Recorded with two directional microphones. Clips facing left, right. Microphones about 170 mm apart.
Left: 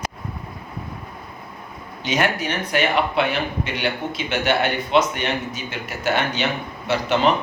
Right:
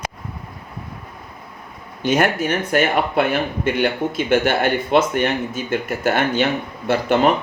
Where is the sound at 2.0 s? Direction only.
50° right (ahead or behind).